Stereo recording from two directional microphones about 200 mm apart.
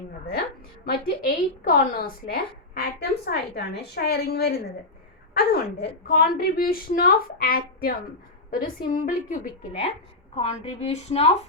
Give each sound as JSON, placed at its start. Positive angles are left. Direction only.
{"t": 0.9, "sound": "a woman's voice", "side_deg": 45}
{"t": 10.3, "sound": "a woman's voice", "side_deg": 30}